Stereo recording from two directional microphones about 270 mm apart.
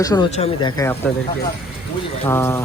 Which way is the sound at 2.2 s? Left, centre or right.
Centre.